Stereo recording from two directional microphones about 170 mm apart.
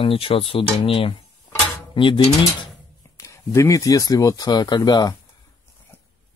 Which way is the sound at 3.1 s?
20° left (ahead or behind).